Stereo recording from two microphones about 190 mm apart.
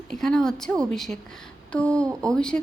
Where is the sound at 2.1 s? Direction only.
15° right (ahead or behind).